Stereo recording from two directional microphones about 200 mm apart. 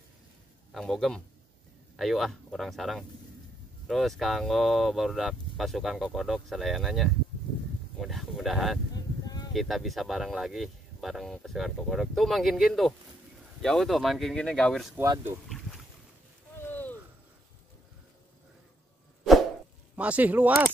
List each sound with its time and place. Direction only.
0.7 s speech: centre (ahead or behind)
8.9 s a sound: 20° left (ahead or behind)
9.5 s speech: centre (ahead or behind)
15.0 s speech: 10° right (ahead or behind)
16.5 s a sound: 10° left (ahead or behind)
20.0 s speech: 5° right (ahead or behind)